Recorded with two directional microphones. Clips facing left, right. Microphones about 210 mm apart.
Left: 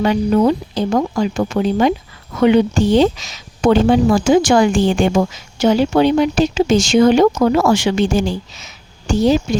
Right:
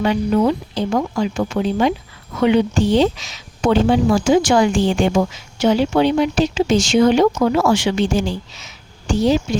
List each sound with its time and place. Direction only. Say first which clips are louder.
0.0 s speech: left 2 dB; 40° left (ahead or behind)